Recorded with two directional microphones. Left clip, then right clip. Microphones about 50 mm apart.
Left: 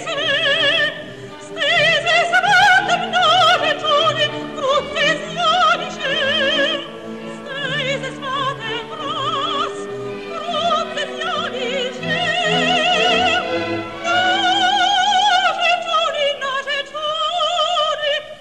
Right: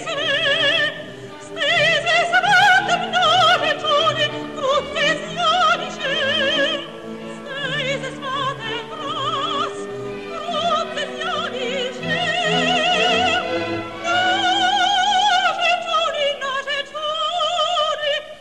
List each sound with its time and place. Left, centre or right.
0.1 s opera: left
10.5 s music: left